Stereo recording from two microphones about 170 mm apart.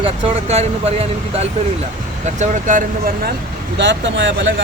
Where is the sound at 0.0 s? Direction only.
40° right (ahead or behind).